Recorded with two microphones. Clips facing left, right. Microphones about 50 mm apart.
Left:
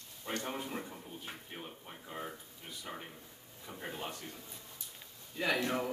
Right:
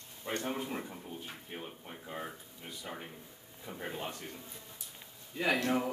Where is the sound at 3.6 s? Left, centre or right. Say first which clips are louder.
Right 2 dB; centre.